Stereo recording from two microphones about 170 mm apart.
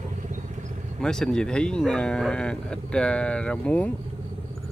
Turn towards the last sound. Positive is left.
turn(degrees=5)  # may be behind; listen again after turning